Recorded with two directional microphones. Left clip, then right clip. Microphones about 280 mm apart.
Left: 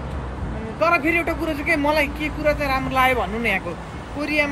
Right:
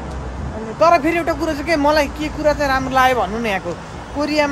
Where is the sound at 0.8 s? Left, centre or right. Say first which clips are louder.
Right 5 dB; centre.